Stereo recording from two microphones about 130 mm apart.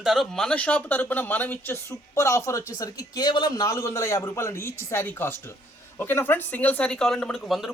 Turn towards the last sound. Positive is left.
turn(degrees=0)  # may be behind; listen again after turning